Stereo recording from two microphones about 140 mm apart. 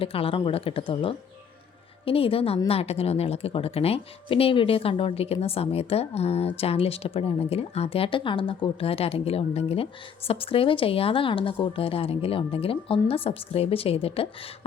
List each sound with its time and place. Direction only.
0.0 s speech: 40° left (ahead or behind)